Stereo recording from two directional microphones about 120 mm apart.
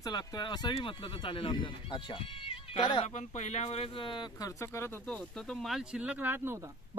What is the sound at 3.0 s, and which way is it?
Speech, 75° left (ahead or behind).